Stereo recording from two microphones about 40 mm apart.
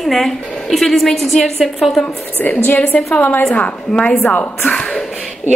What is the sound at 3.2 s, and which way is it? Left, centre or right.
Speech, left.